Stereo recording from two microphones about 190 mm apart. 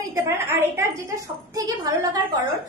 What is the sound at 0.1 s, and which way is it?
A woman's voice, 15° right (ahead or behind).